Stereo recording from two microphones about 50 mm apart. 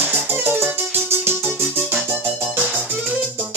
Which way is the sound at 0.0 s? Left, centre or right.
Right.